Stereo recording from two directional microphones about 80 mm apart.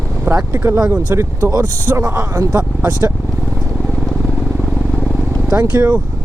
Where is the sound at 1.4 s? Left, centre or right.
Right.